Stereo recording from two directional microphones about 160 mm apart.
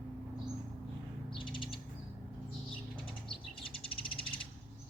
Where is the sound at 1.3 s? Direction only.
30° left (ahead or behind).